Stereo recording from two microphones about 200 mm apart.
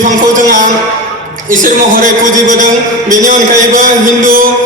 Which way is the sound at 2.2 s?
40° right (ahead or behind).